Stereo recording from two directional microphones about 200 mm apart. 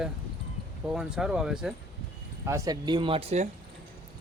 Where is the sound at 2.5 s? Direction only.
15° right (ahead or behind); by 3.5 s 30° right (ahead or behind).